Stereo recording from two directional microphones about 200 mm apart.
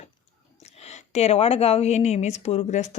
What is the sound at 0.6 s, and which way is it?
Speech, 35° left (ahead or behind).